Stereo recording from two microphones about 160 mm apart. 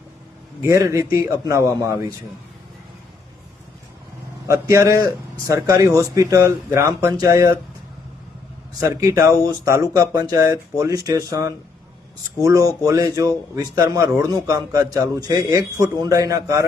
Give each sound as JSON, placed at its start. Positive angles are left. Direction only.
{"t": 0.6, "sound": "a man's voice", "side_deg": -20}
{"t": 4.4, "sound": "a man's voice", "side_deg": -20}
{"t": 8.8, "sound": "a man's voice", "side_deg": -20}